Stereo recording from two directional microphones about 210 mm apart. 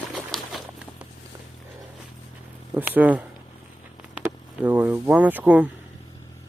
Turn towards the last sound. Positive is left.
turn(degrees=-5)  # may be behind; listen again after turning